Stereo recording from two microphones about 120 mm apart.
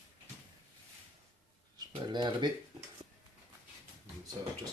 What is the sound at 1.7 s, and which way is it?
Speech, 40° right (ahead or behind).